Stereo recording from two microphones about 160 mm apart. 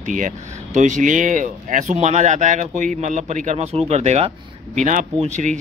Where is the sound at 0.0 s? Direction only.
55° right (ahead or behind).